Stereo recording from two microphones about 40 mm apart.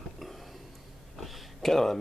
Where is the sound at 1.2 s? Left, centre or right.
Centre.